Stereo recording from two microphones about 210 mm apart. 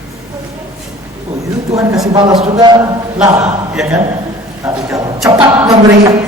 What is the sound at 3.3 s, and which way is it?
Speech, 10° right (ahead or behind).